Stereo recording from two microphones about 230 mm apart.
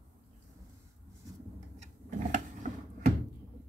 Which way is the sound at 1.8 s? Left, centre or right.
Right.